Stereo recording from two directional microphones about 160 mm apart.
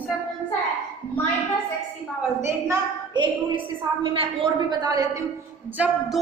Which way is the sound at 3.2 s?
30° right (ahead or behind).